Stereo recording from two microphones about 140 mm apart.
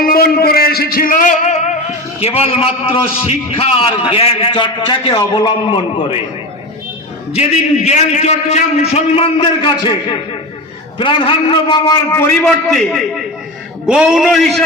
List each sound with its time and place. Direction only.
0.0 s a man's voice: 90° left; by 1.7 s 55° left (ahead or behind)
2.2 s a man's voice: 45° left (ahead or behind)
7.3 s a man's voice: 50° left (ahead or behind); by 11.9 s 35° left (ahead or behind)
12.1 s a man's voice: 15° left (ahead or behind)
12.4 s a man's voice: 5° left (ahead or behind)